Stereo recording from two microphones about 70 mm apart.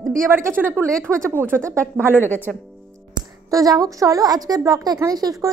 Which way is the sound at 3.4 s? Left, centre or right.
Right.